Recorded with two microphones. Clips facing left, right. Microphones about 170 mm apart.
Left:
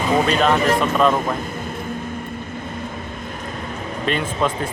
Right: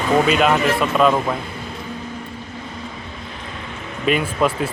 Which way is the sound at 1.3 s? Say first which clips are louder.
Left 2 dB; 45° left (ahead or behind).